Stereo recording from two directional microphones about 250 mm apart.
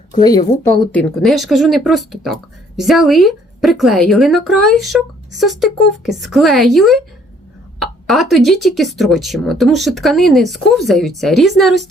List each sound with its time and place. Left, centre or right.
0.2 s speech: centre
0.9 s speech: centre
7.8 s a sound: centre
8.4 s speech: centre